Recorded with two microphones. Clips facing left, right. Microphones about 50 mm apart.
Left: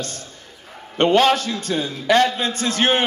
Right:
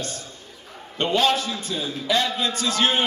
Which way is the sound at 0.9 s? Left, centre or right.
Left.